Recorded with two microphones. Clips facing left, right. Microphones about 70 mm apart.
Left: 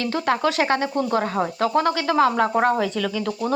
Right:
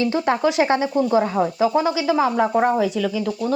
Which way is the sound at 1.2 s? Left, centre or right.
Left.